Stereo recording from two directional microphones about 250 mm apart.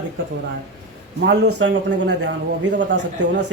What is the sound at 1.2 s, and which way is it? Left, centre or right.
A man's voice, right.